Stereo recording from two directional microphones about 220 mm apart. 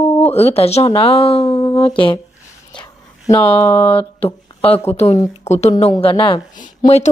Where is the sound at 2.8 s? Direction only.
15° left (ahead or behind).